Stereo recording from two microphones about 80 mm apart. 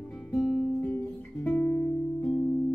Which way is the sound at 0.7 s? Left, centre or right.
Left.